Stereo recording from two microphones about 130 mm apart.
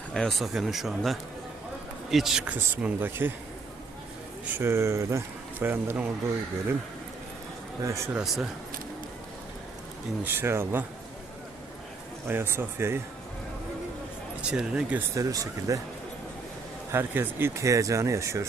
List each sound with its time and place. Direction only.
0.1 s speech: 5° left (ahead or behind); by 3.3 s 15° right (ahead or behind)
4.5 s speech: 20° right (ahead or behind)
7.8 s speech: 25° right (ahead or behind)
8.1 s speech: 5° right (ahead or behind)
10.2 s speech: 20° right (ahead or behind)
12.3 s speech: 20° right (ahead or behind)
14.5 s speech: 5° right (ahead or behind)
15.1 s speech: 25° right (ahead or behind)
16.9 s speech: 20° right (ahead or behind)